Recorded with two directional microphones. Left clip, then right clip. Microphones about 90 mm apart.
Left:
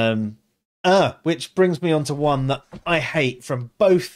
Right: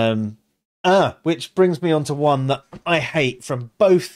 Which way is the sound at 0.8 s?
15° right (ahead or behind).